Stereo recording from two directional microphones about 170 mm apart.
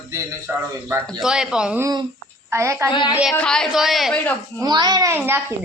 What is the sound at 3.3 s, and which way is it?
A woman's voice, 5° left (ahead or behind).